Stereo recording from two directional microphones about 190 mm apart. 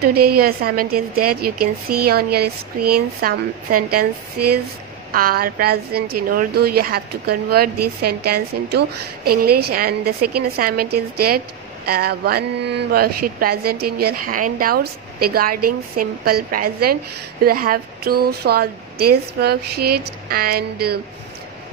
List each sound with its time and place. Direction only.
0.0 s speech: 55° right (ahead or behind)
5.1 s a woman's voice: 50° right (ahead or behind)